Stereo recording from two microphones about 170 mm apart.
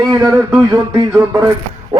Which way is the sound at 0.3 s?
15° right (ahead or behind).